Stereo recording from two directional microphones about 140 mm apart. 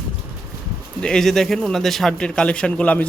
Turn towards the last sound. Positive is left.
turn(degrees=10)  # may be behind; listen again after turning